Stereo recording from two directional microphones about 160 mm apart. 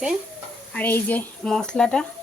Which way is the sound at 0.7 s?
10° left (ahead or behind).